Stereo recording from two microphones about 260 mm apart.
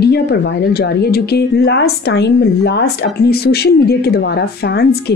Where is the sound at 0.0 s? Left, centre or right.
Left.